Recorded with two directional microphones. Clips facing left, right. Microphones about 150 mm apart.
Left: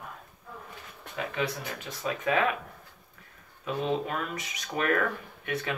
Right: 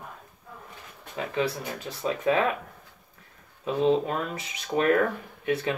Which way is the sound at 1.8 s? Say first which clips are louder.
Right 4 dB; 30° right (ahead or behind).